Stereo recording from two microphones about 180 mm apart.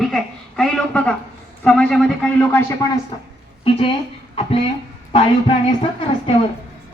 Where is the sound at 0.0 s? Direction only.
Centre (ahead or behind).